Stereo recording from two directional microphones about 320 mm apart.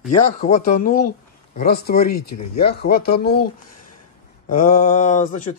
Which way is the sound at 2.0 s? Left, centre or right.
Left.